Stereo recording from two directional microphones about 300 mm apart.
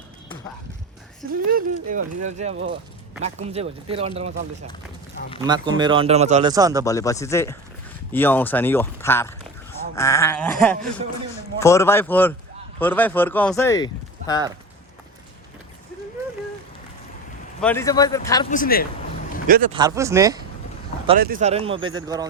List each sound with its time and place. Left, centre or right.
1.3 s speech: right
5.4 s speech: centre
6.5 s speech: centre
6.8 s speech: centre
17.6 s speech: centre
18.5 s speech: left
19.5 s speech: right
19.7 s speech: centre
21.2 s speech: right; by 22.3 s centre